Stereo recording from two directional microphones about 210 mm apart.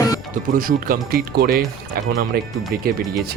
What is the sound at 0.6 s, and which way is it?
Speech, 40° right (ahead or behind).